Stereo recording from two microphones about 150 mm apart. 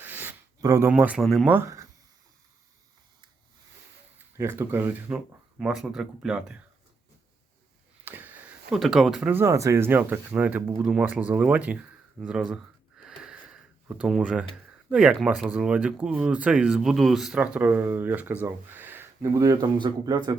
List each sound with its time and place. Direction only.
0.0 s a sound: 15° right (ahead or behind)
0.6 s speech: 20° right (ahead or behind)
0.9 s speech: 10° right (ahead or behind)
1.2 s speech: centre (ahead or behind)
1.5 s speech: 15° right (ahead or behind)
4.4 s speech: 15° right (ahead or behind)
8.0 s a sound: 10° right (ahead or behind)
8.7 s speech: centre (ahead or behind)
9.3 s speech: 20° right (ahead or behind)
13.1 s a sound: 5° right (ahead or behind)
14.8 s speech: 5° right (ahead or behind); by 20.3 s 30° right (ahead or behind)